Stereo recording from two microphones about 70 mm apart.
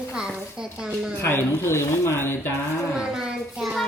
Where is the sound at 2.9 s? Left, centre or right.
Centre.